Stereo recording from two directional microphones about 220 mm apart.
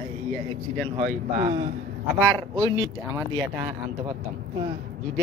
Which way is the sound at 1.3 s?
20° right (ahead or behind).